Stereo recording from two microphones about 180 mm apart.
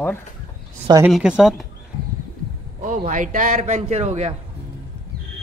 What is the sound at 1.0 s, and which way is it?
Speech, 5° right (ahead or behind).